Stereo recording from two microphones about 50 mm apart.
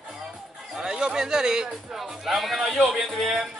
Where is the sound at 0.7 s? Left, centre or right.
Centre.